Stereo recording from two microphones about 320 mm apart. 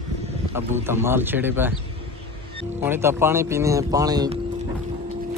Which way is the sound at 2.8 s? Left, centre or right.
Centre.